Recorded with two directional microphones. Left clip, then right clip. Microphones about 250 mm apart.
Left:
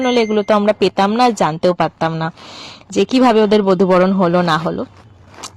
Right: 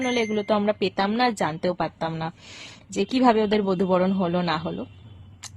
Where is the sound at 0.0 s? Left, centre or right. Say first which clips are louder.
Left 10 dB; left.